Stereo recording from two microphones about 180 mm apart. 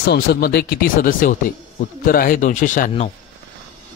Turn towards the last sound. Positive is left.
turn(degrees=45)  # may be behind; listen again after turning